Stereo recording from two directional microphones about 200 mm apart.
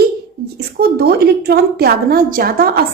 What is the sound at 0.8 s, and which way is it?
A woman's voice, 50° right (ahead or behind).